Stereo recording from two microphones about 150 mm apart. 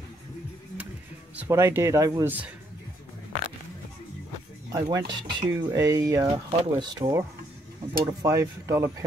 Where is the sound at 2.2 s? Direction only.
10° right (ahead or behind).